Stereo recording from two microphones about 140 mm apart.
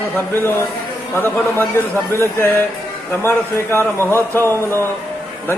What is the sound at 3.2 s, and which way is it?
Speech, 20° left (ahead or behind).